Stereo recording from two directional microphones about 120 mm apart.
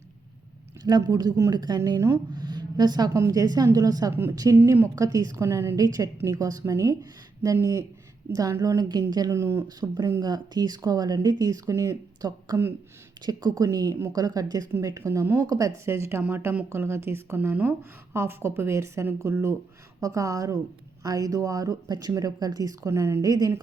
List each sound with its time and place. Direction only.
0.9 s speech: 35° right (ahead or behind)
2.3 s a sound: 35° right (ahead or behind)
3.2 s speech: 30° right (ahead or behind)
4.1 s speech: 20° right (ahead or behind); by 9.3 s 35° right (ahead or behind)
9.3 s speech: 20° right (ahead or behind)
10.0 s speech: 30° right (ahead or behind)